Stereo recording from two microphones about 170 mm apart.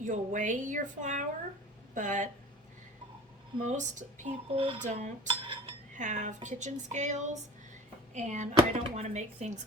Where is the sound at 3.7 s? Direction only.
45° right (ahead or behind).